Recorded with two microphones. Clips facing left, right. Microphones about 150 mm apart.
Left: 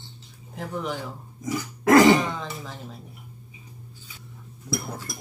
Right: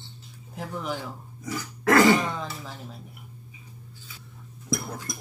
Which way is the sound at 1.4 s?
15° left (ahead or behind).